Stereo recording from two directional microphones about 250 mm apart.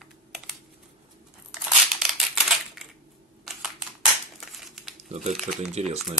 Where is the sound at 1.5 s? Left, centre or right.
Centre.